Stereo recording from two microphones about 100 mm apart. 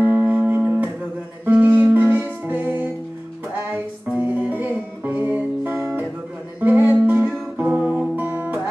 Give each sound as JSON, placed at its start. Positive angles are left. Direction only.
{"t": 0.0, "sound": "music", "side_deg": -20}